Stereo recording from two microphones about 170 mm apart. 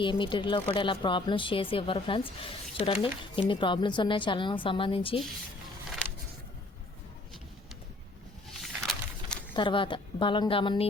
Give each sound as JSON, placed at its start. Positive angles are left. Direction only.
{"t": 0.0, "sound": "speech", "side_deg": 30}
{"t": 8.6, "sound": "a sound", "side_deg": 0}
{"t": 9.6, "sound": "speech", "side_deg": 30}